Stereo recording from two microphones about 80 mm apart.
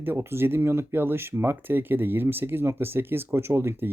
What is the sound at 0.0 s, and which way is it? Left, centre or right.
Speech, right.